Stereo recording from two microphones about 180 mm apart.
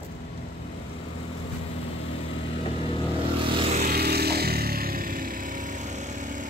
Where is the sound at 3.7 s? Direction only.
60° right (ahead or behind).